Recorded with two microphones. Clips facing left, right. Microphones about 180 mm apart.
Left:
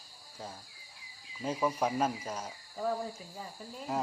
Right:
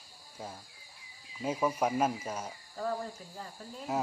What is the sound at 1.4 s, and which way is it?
Speech, 10° right (ahead or behind).